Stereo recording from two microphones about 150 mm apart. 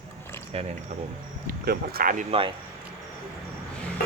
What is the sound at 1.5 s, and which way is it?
Speech, 90° right.